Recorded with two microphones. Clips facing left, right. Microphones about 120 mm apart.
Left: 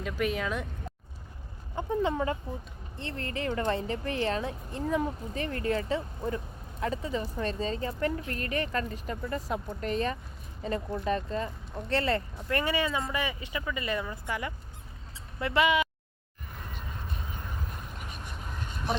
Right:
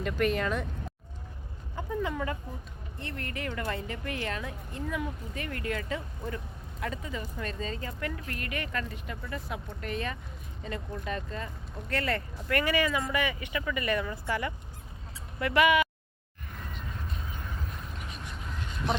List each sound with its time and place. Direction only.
0.0 s speech: 5° left (ahead or behind)
1.7 s speech: 30° left (ahead or behind)
17.9 s a sound: 45° left (ahead or behind)